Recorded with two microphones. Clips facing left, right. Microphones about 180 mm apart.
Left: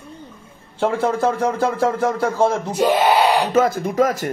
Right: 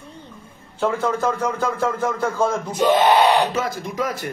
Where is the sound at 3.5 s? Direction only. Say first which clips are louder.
Left 8 dB; 50° left (ahead or behind).